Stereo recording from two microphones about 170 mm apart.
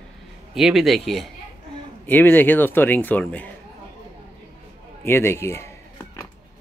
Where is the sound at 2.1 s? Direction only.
10° left (ahead or behind).